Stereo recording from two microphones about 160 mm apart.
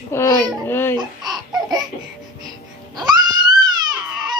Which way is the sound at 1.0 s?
25° right (ahead or behind).